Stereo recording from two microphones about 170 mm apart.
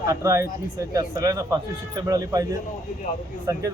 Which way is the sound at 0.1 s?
15° right (ahead or behind).